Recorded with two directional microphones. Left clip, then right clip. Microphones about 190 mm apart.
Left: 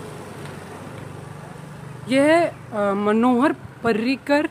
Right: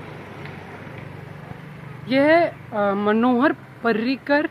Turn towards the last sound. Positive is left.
turn(degrees=20)  # may be behind; listen again after turning